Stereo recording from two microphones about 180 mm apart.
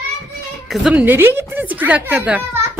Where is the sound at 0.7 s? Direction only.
5° right (ahead or behind).